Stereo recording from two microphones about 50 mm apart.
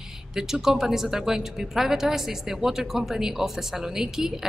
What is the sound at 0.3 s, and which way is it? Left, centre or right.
Speech, centre.